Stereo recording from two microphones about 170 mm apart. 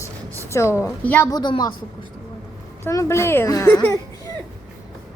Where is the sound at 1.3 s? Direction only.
25° left (ahead or behind).